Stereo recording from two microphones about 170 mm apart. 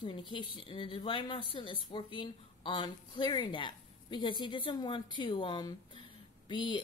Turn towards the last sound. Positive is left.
turn(degrees=30)  # may be behind; listen again after turning